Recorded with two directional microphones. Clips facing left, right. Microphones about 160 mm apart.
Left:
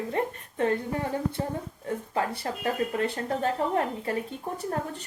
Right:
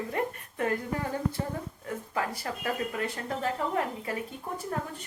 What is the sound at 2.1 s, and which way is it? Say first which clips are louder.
A woman's voice: left 2 dB; 30° left (ahead or behind).